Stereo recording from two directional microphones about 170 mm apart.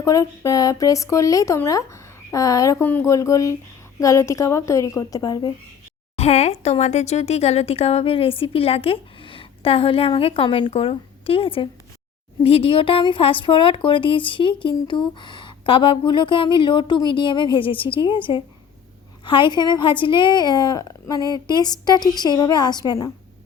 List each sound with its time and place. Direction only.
0.0 s speech: 20° left (ahead or behind)
6.1 s speech: 40° left (ahead or behind); by 23.1 s 20° left (ahead or behind)